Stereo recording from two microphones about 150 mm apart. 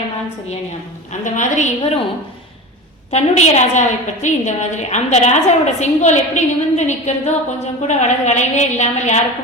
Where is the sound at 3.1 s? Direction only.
50° left (ahead or behind).